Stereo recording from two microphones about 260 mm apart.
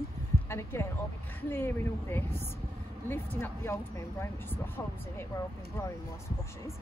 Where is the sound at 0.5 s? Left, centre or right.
Centre.